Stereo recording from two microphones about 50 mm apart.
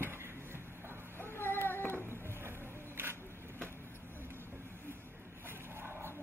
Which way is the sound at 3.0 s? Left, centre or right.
Right.